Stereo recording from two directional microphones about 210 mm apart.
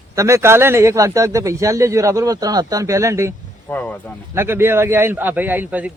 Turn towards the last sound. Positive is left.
turn(degrees=-10)  # may be behind; listen again after turning